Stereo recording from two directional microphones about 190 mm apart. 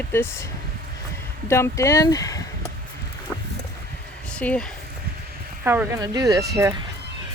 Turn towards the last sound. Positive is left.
turn(degrees=-15)  # may be behind; listen again after turning